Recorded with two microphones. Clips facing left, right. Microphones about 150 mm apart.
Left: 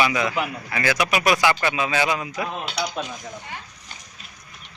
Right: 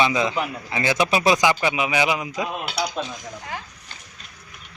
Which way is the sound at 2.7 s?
5° left (ahead or behind).